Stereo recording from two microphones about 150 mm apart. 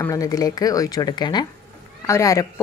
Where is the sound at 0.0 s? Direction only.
25° left (ahead or behind).